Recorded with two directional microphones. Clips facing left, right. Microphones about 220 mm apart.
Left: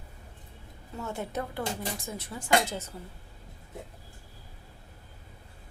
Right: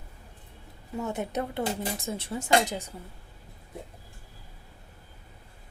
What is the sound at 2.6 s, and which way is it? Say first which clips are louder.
Speech: right 2 dB; 15° right (ahead or behind).